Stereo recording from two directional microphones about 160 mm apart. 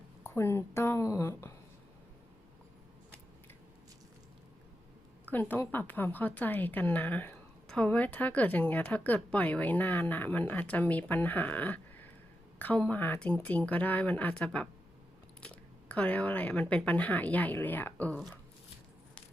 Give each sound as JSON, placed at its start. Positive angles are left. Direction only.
{"t": 0.2, "sound": "a woman's voice", "side_deg": 15}
{"t": 5.3, "sound": "a woman's voice", "side_deg": 10}